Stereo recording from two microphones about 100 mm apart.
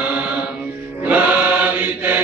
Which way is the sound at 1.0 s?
15° right (ahead or behind).